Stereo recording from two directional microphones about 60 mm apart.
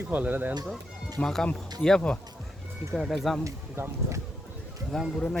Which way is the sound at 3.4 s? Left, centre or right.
Right.